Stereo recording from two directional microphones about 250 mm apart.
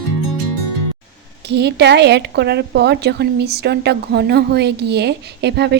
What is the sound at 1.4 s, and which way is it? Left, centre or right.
Speech, right.